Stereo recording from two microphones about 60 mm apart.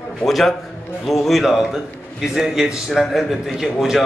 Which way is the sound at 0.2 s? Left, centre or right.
Centre.